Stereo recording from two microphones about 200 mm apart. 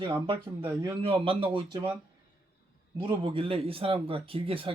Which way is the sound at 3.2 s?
25° right (ahead or behind).